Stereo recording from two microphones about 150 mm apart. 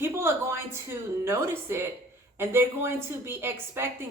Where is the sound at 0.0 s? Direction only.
15° right (ahead or behind).